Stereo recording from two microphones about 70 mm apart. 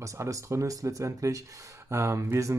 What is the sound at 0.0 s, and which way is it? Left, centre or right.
Speech, right.